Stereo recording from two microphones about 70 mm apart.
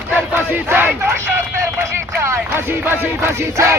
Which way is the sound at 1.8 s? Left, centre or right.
Right.